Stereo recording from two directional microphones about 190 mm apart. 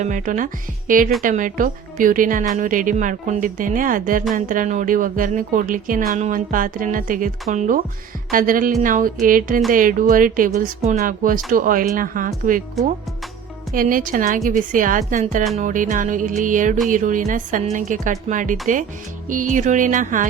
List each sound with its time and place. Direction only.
0.0 s speech: 45° right (ahead or behind)
12.8 s speech: centre (ahead or behind)
13.7 s speech: 45° right (ahead or behind)